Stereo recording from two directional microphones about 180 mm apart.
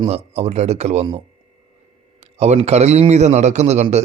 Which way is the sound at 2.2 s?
35° right (ahead or behind).